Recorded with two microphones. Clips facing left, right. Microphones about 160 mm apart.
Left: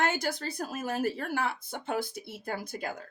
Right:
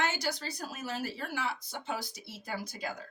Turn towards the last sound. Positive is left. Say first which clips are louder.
# left 2 dB
turn(degrees=55)  # may be behind; listen again after turning